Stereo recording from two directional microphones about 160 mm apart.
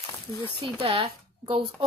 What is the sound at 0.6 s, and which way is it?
A woman's voice, 35° right (ahead or behind).